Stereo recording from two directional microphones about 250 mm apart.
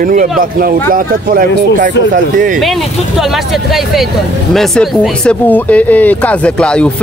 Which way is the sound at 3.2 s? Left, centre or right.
Centre.